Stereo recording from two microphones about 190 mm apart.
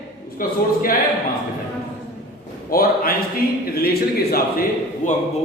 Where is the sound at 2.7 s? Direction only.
50° left (ahead or behind).